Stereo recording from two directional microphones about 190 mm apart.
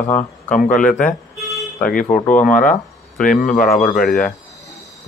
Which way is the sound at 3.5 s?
5° left (ahead or behind).